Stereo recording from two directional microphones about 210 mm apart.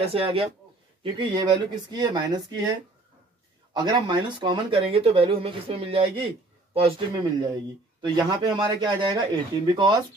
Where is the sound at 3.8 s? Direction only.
20° right (ahead or behind).